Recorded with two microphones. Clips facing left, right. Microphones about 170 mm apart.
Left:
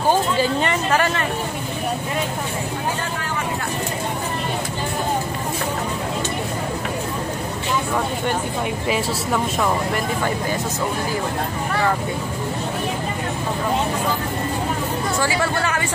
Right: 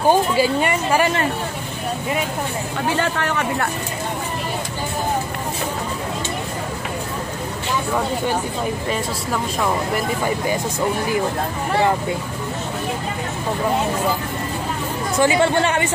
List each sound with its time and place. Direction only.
0.1 s speech: 10° right (ahead or behind)
3.0 s speech: 70° right (ahead or behind)
8.8 s speech: centre (ahead or behind)
15.1 s speech: 20° right (ahead or behind)